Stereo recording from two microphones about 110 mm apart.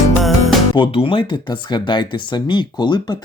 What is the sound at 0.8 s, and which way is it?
Speech, 50° left (ahead or behind).